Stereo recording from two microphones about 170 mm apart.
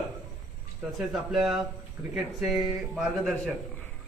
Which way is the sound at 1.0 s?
Centre (ahead or behind).